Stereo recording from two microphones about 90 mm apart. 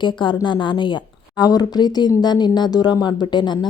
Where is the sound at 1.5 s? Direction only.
45° left (ahead or behind).